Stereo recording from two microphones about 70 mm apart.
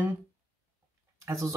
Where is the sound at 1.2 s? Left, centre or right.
Right.